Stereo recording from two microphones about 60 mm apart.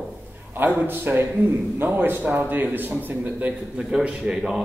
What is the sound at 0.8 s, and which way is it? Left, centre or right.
A man's voice, right.